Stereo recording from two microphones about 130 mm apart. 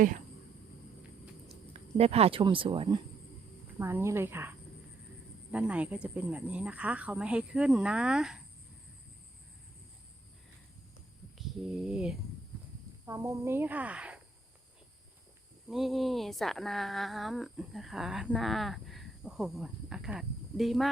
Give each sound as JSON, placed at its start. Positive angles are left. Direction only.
{"t": 1.7, "sound": "speech", "side_deg": -50}
{"t": 3.8, "sound": "speech", "side_deg": -20}
{"t": 11.3, "sound": "speech", "side_deg": -5}
{"t": 13.1, "sound": "speech", "side_deg": -25}
{"t": 15.7, "sound": "speech", "side_deg": 0}